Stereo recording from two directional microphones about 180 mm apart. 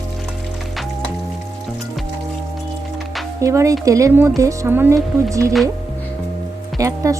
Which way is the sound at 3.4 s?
15° right (ahead or behind).